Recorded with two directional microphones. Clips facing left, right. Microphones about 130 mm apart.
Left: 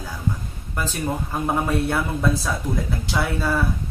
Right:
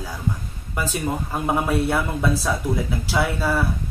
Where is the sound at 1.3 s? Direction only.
5° right (ahead or behind).